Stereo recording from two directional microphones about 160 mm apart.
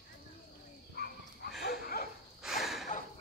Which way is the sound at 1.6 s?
75° left (ahead or behind).